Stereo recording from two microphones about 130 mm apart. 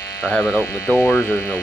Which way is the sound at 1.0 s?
20° left (ahead or behind).